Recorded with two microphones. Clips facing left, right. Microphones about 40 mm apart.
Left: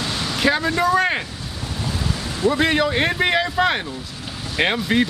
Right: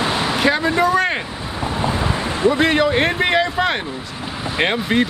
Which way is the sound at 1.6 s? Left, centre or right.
Right.